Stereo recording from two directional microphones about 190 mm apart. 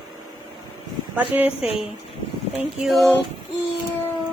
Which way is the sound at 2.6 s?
Centre (ahead or behind).